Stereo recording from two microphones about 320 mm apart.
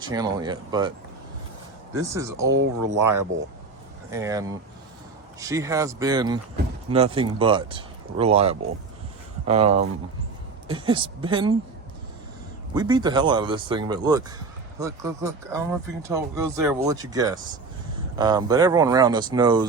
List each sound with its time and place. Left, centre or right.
0.0 s speech: centre
2.0 s speech: centre
2.5 s speech: right
4.1 s speech: centre
12.7 s speech: centre